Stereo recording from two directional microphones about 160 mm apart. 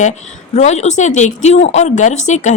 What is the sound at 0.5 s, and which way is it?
A woman's voice, 45° left (ahead or behind).